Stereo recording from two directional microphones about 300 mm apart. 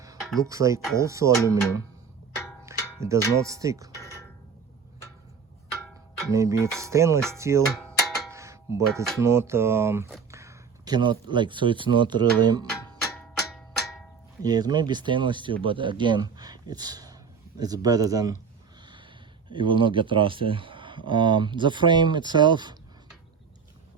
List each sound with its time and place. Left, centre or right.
0.2 s a sound: centre
0.4 s speech: centre
2.6 s a sound: centre
3.4 s speech: centre
6.3 s speech: centre
7.7 s music: centre
9.2 s speech: centre
13.1 s a sound: centre
14.4 s speech: centre
19.5 s speech: centre